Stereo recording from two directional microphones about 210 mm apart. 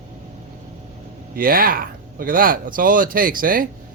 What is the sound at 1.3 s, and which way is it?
Speech, 45° right (ahead or behind).